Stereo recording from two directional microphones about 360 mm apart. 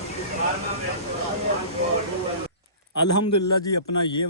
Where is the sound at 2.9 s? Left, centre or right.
Left.